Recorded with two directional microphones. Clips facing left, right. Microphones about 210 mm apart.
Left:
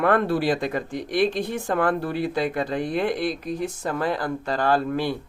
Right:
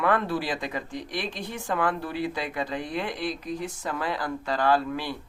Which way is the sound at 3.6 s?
45° left (ahead or behind).